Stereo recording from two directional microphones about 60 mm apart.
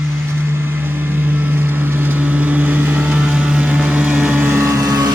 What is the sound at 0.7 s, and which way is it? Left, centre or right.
Vehicle, right.